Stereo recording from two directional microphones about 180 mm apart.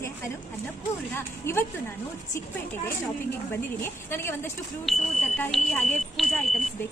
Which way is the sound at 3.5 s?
15° left (ahead or behind).